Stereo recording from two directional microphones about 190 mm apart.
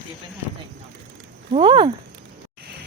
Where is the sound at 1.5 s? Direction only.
25° right (ahead or behind).